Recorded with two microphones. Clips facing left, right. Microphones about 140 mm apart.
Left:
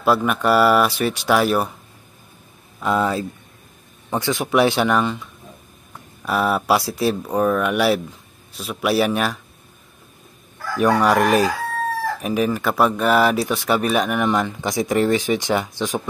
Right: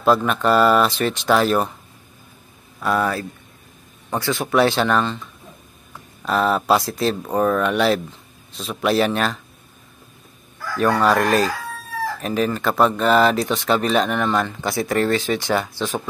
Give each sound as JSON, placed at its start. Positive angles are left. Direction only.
{"t": 0.0, "sound": "speech", "side_deg": 10}
{"t": 2.8, "sound": "speech", "side_deg": 20}
{"t": 6.2, "sound": "speech", "side_deg": 10}
{"t": 10.8, "sound": "speech", "side_deg": 15}